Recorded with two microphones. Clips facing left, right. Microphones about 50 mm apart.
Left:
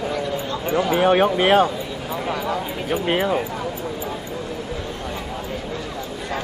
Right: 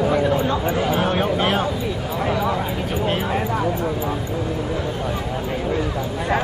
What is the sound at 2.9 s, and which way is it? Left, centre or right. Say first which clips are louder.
Speech: left 4 dB; centre.